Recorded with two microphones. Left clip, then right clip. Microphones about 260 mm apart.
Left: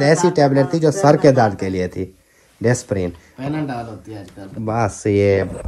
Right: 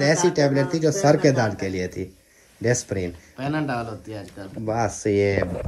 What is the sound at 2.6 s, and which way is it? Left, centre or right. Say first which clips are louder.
Speech: left 4 dB; left.